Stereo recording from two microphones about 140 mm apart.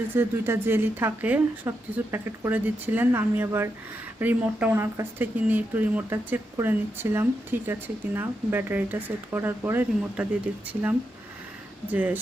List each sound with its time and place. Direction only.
0.1 s speech: 15° right (ahead or behind)
11.9 s speech: 10° right (ahead or behind)